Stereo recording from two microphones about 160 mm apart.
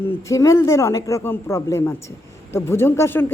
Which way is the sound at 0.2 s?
20° left (ahead or behind).